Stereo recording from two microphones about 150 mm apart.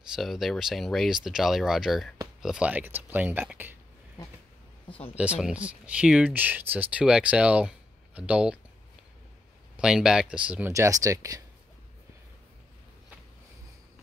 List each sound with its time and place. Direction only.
0.1 s speech: centre (ahead or behind)
4.8 s speech: 35° left (ahead or behind)
5.1 s speech: 10° right (ahead or behind)
9.8 s speech: 5° right (ahead or behind)
10.7 s speech: 20° right (ahead or behind)